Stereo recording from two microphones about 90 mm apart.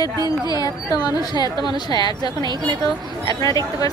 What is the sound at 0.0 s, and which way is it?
Speech, 50° left (ahead or behind).